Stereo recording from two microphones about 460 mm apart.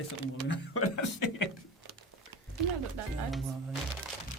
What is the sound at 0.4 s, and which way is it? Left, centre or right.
Speech, left.